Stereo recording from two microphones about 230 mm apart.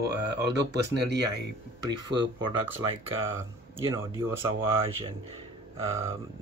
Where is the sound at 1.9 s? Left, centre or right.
Centre.